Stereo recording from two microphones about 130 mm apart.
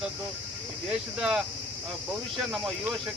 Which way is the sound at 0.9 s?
5° right (ahead or behind).